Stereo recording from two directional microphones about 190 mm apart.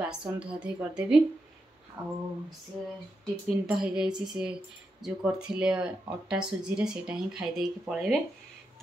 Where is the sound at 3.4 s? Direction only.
5° right (ahead or behind).